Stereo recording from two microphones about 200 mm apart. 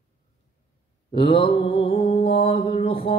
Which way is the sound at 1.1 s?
25° left (ahead or behind).